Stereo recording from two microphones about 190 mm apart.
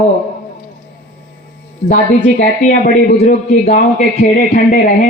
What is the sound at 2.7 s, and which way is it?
A man's voice, 40° left (ahead or behind).